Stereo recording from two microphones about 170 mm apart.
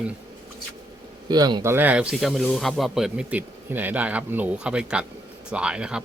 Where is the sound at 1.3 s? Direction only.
25° right (ahead or behind).